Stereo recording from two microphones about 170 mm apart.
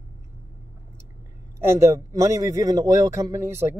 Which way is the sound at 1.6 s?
15° right (ahead or behind).